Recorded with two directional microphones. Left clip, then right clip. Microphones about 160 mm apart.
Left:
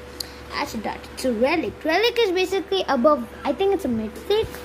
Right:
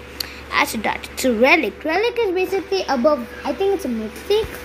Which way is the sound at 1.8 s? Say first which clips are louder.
Even; centre (ahead or behind).